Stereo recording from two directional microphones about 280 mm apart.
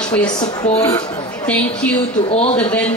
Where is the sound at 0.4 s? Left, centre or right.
Centre.